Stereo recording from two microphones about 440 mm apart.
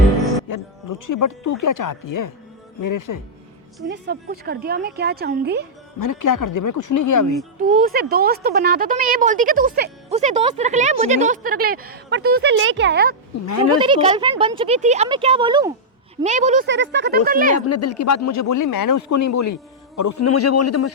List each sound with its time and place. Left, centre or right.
0.4 s speech: left
3.8 s speech: right
6.0 s speech: left
7.7 s speech: centre
13.4 s speech: left
13.7 s speech: centre
17.7 s speech: left